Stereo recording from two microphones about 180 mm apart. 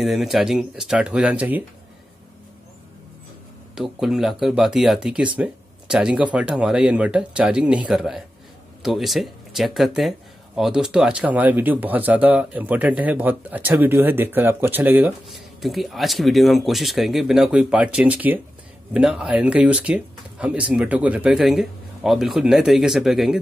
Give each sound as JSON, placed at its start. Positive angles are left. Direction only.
{"t": 0.0, "sound": "speech", "side_deg": 0}
{"t": 3.7, "sound": "speech", "side_deg": 0}